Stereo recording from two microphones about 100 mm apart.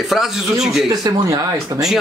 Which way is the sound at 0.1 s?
5° right (ahead or behind).